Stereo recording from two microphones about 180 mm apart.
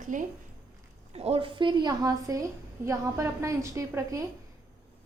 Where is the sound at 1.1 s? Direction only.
35° right (ahead or behind).